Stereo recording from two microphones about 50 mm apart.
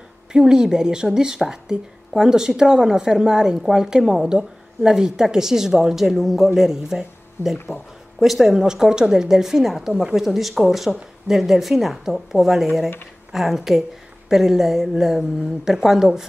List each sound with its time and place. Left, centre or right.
0.3 s speech: centre
7.5 s speech: left
8.2 s speech: centre